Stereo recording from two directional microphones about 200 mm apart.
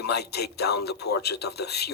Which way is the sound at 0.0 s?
55° left (ahead or behind).